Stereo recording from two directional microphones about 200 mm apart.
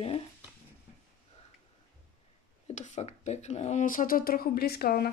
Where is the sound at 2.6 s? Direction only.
35° left (ahead or behind); by 5.1 s 50° left (ahead or behind).